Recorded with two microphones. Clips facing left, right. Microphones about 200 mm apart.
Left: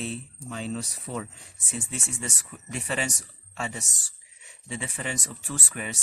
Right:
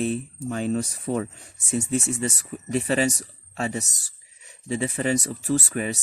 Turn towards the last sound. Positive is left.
turn(degrees=-40)  # may be behind; listen again after turning